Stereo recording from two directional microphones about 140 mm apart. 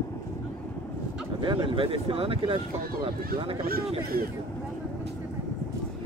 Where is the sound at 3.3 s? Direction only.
90° right.